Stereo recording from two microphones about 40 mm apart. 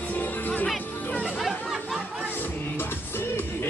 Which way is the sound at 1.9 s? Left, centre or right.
Right.